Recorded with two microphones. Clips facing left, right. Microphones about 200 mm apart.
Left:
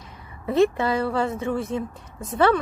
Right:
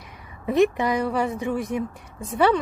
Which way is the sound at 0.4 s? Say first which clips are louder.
Even; 15° right (ahead or behind).